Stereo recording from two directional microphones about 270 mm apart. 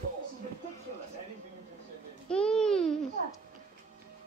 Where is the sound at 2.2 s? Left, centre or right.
Centre.